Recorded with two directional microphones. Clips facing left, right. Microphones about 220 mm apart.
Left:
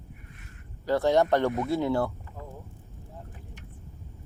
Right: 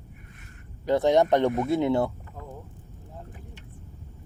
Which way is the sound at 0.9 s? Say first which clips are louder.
Right 2 dB; 20° right (ahead or behind).